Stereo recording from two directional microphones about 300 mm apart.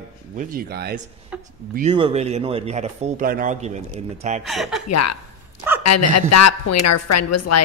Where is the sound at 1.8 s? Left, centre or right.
Centre.